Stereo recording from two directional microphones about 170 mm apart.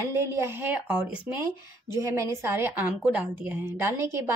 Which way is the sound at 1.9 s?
20° right (ahead or behind).